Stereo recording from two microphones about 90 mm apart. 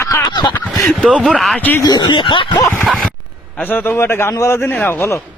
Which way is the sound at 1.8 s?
50° left (ahead or behind).